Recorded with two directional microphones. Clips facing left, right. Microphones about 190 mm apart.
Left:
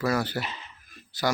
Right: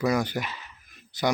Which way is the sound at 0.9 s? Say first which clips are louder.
Right 1 dB; 20° right (ahead or behind).